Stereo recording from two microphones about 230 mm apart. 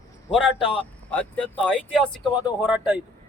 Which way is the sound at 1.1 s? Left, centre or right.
Centre.